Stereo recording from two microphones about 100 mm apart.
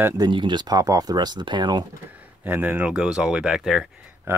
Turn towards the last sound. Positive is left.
turn(degrees=-5)  # may be behind; listen again after turning